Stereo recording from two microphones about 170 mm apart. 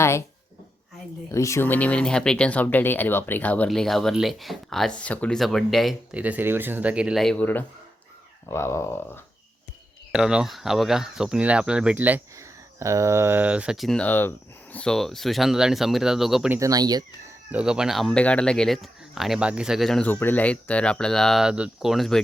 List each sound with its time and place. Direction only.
1.3 s speech: 15° left (ahead or behind)
10.1 s speech: 5° right (ahead or behind)
16.6 s speech: 20° right (ahead or behind)
17.5 s speech: 5° right (ahead or behind)